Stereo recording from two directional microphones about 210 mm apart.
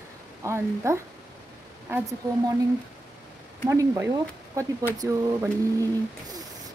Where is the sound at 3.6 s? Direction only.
10° right (ahead or behind).